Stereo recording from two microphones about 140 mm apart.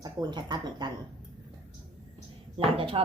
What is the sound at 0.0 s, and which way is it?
Speech, 30° right (ahead or behind).